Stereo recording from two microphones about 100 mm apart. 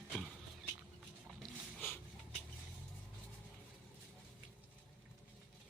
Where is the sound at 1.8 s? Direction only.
20° left (ahead or behind).